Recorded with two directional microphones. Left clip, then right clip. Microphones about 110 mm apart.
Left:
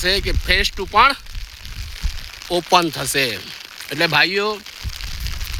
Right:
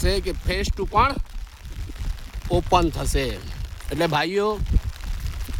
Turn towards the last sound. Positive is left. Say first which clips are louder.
# left 5 dB
turn(degrees=-25)  # may be behind; listen again after turning